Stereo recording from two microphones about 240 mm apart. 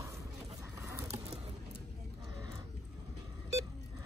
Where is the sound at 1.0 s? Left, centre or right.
Right.